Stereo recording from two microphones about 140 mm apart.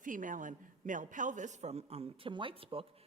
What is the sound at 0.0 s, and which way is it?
A man's voice, 70° right (ahead or behind).